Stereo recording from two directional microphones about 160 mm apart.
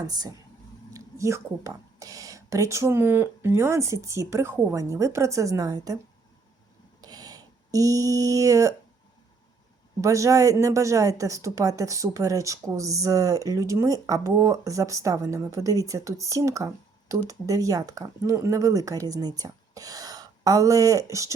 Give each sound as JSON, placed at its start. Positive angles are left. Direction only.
{"t": 0.1, "sound": "a woman's voice", "side_deg": -25}
{"t": 7.0, "sound": "a sound", "side_deg": -25}
{"t": 10.0, "sound": "a woman's voice", "side_deg": -20}